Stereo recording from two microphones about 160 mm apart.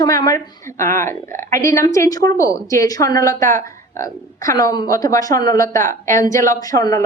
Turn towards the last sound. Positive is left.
turn(degrees=20)  # may be behind; listen again after turning